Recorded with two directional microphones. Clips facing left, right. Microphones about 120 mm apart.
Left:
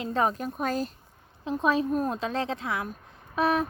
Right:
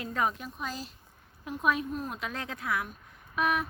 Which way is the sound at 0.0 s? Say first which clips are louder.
Left 5 dB; 30° left (ahead or behind).